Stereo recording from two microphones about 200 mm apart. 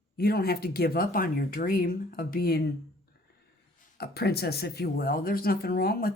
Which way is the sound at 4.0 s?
55° left (ahead or behind).